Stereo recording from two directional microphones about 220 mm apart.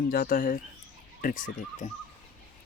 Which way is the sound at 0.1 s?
40° left (ahead or behind).